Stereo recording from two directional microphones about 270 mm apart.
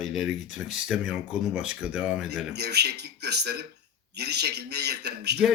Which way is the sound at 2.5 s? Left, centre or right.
Right.